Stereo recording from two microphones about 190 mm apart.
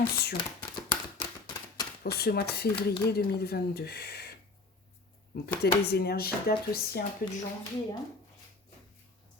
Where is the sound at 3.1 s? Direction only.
55° left (ahead or behind).